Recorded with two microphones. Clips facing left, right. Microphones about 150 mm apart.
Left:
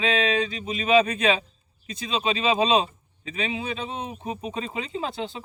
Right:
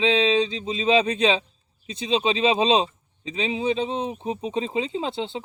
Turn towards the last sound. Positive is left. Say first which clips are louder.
# right 3 dB
turn(degrees=-25)  # may be behind; listen again after turning